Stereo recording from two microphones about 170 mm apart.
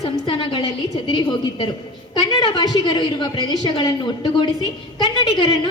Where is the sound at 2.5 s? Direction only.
25° left (ahead or behind).